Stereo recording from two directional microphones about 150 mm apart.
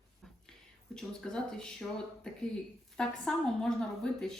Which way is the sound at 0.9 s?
5° left (ahead or behind).